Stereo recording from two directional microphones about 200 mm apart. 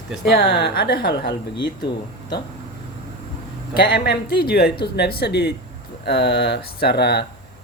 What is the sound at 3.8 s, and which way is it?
Speech, 55° left (ahead or behind).